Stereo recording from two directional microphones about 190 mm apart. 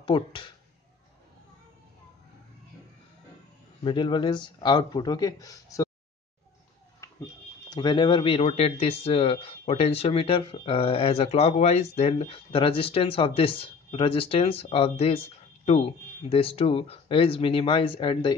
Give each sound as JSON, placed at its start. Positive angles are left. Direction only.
{"t": 0.0, "sound": "speech", "side_deg": 25}
{"t": 3.8, "sound": "speech", "side_deg": 25}
{"t": 7.0, "sound": "a sound", "side_deg": 15}
{"t": 7.7, "sound": "speech", "side_deg": 25}